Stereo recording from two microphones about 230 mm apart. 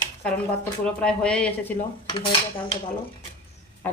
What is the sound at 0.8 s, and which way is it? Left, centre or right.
Speech, centre.